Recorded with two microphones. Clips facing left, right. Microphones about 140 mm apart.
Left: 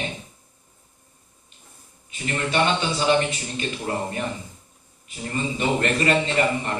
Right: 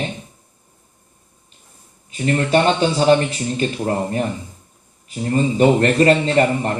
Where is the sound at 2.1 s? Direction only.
40° right (ahead or behind).